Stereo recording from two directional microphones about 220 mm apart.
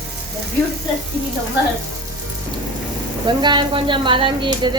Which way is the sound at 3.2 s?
20° right (ahead or behind).